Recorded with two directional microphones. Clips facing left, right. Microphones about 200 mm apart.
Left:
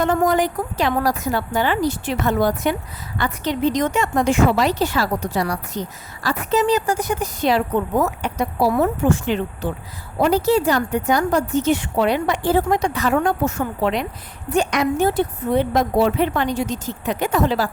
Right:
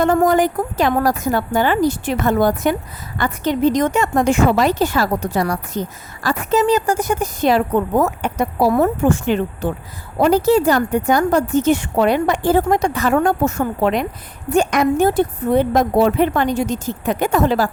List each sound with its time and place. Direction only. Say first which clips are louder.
0.0 s a woman's voice: right 4 dB; 50° right (ahead or behind)